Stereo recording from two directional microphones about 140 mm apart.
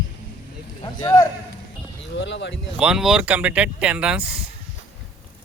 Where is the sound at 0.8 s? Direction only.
30° left (ahead or behind).